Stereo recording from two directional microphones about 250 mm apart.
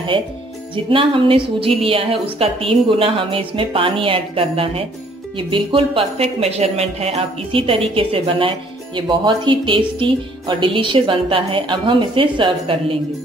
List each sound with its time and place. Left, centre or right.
0.8 s speech: right